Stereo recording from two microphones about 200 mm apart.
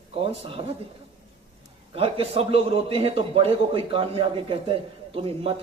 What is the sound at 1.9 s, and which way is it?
A man's voice, 30° right (ahead or behind).